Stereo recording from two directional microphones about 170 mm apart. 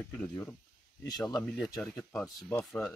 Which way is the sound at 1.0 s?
25° left (ahead or behind).